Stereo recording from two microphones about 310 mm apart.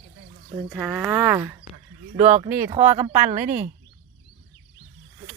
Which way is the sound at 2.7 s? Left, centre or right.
Right.